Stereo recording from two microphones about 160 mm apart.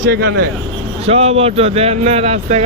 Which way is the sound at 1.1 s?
40° right (ahead or behind).